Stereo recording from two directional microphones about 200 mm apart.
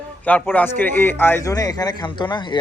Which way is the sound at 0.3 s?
10° left (ahead or behind).